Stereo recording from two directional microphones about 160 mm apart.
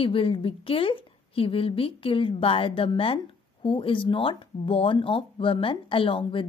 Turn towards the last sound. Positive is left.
turn(degrees=35)  # may be behind; listen again after turning